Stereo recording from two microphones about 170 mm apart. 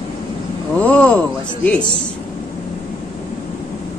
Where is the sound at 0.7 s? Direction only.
5° left (ahead or behind).